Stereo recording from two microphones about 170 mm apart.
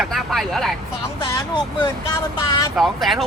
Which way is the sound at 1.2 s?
25° left (ahead or behind).